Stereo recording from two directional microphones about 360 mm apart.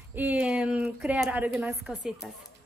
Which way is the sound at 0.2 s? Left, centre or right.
Centre.